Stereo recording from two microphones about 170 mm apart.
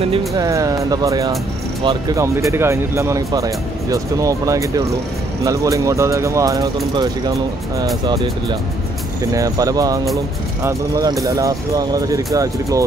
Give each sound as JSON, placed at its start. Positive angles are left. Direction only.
{"t": 0.4, "sound": "speech", "side_deg": -20}